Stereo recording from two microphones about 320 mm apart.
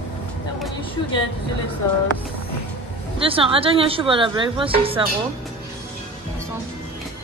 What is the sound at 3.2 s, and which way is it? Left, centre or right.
A woman's voice, centre.